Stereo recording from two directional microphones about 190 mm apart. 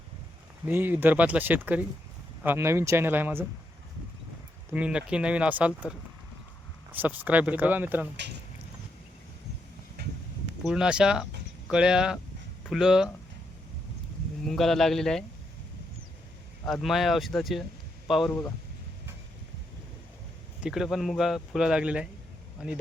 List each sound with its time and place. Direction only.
0.7 s speech: 10° right (ahead or behind)
4.7 s speech: 5° right (ahead or behind)
6.9 s speech: 10° right (ahead or behind)
8.1 s speech: 65° right (ahead or behind)
10.6 s speech: 5° right (ahead or behind)
14.4 s speech: centre (ahead or behind)
16.6 s speech: centre (ahead or behind)
18.3 s a man's voice: 10° left (ahead or behind)
20.6 s speech: 5° right (ahead or behind)